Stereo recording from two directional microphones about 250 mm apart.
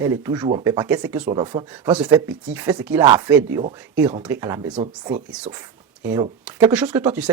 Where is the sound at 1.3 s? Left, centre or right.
Centre.